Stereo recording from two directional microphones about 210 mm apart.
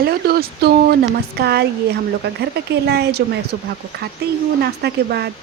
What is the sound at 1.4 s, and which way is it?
Speech, 50° right (ahead or behind).